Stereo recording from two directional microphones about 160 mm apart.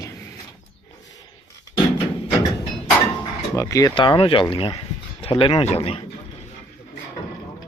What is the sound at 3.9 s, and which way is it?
Speech, 30° left (ahead or behind).